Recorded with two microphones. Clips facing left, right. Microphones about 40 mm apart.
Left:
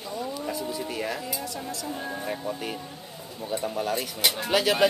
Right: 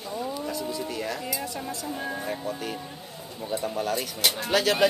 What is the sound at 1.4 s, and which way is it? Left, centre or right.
Speech, right.